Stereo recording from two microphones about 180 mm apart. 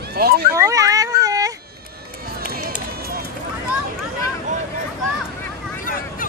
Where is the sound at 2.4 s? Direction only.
60° right (ahead or behind).